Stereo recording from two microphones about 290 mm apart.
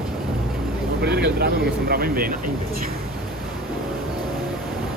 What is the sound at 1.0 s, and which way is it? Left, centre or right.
Vehicle, right.